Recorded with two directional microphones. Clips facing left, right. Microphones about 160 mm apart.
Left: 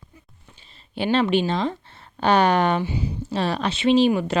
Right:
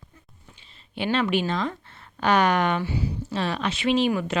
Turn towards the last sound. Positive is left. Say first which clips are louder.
# left 5 dB
turn(degrees=30)  # may be behind; listen again after turning